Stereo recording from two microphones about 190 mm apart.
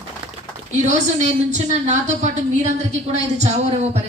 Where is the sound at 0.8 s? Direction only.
40° right (ahead or behind).